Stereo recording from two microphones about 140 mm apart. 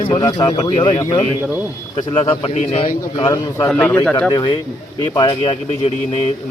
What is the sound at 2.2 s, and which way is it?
Speech, 45° left (ahead or behind).